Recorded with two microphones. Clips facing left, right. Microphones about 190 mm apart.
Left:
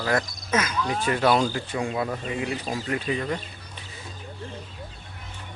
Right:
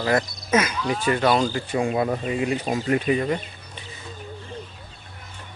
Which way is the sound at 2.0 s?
35° right (ahead or behind).